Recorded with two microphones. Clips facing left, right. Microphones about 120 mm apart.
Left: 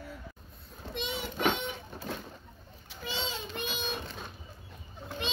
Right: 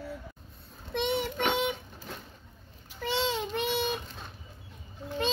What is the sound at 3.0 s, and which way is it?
Child singing, 70° right (ahead or behind).